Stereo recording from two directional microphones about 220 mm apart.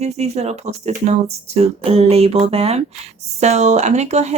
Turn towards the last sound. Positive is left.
turn(degrees=-30)  # may be behind; listen again after turning